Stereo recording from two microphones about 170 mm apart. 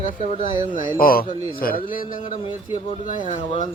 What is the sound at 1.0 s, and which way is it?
A man's voice, 60° left (ahead or behind).